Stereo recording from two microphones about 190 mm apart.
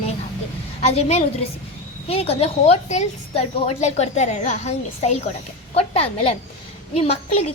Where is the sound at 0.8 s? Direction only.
35° left (ahead or behind).